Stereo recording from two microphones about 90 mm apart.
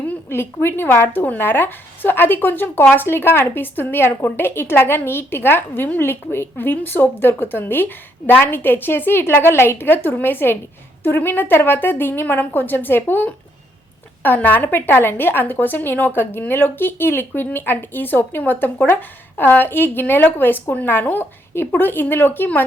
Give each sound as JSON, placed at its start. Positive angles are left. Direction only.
{"t": 0.1, "sound": "speech", "side_deg": 25}